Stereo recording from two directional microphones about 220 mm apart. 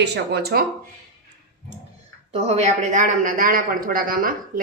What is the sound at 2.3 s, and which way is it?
A man's voice, 30° right (ahead or behind).